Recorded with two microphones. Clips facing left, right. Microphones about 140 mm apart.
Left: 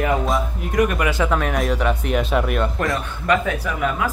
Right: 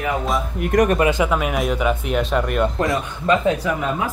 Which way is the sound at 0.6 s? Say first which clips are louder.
Right 6 dB; 55° right (ahead or behind).